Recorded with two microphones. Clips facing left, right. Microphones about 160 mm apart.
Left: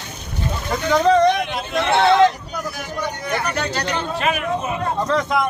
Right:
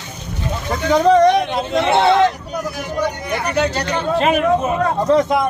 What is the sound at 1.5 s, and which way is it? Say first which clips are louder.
Speech: right 5 dB; 25° right (ahead or behind).